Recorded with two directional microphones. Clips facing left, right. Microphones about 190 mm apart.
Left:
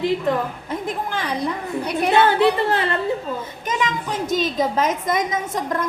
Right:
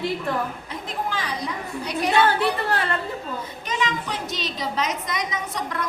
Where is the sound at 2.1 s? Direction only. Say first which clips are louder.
Left 5 dB; 20° left (ahead or behind).